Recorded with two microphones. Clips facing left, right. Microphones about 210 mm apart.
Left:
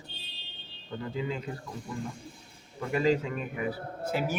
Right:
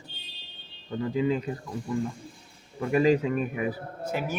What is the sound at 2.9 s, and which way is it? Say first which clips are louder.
Speech: right 4 dB; 10° right (ahead or behind).